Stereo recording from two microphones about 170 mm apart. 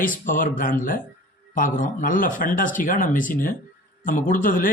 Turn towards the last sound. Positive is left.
turn(degrees=55)  # may be behind; listen again after turning